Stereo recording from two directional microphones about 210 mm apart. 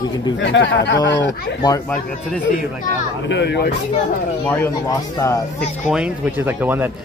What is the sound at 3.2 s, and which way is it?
Speech, 55° left (ahead or behind).